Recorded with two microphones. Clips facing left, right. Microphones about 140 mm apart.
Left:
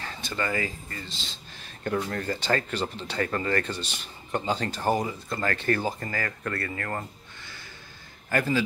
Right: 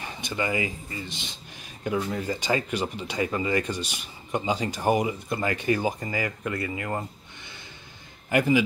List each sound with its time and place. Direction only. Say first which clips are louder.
0.0 s speech: right 2 dB; 15° right (ahead or behind)